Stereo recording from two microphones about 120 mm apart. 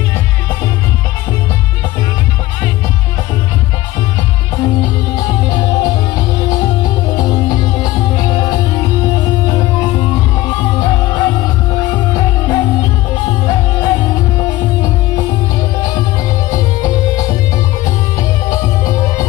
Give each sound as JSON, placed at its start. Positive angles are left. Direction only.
{"t": 5.1, "sound": "music", "side_deg": 30}
{"t": 16.4, "sound": "music", "side_deg": 30}
{"t": 18.5, "sound": "music", "side_deg": 25}